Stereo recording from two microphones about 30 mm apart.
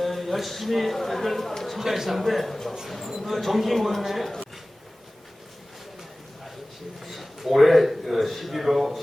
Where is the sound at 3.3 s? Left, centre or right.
Centre.